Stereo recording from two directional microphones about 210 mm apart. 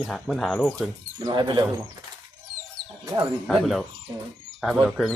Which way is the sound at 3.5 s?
Centre (ahead or behind).